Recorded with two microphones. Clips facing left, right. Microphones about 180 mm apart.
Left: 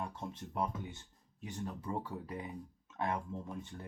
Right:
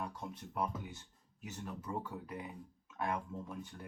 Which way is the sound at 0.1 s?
25° left (ahead or behind).